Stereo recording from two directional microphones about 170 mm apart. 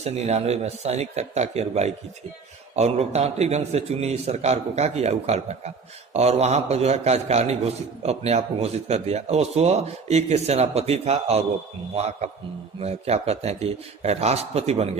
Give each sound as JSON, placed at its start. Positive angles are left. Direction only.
{"t": 0.0, "sound": "a man's voice", "side_deg": -40}